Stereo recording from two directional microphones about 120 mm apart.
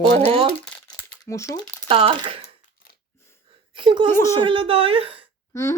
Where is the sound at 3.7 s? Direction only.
45° right (ahead or behind).